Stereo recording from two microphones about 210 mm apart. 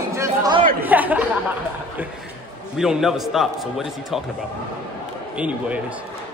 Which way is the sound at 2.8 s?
Centre (ahead or behind).